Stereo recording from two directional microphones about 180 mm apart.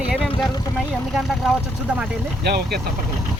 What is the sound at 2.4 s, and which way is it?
Speech, 65° right (ahead or behind).